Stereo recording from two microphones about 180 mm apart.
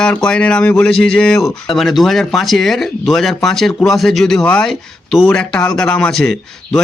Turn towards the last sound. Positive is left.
turn(degrees=5)  # may be behind; listen again after turning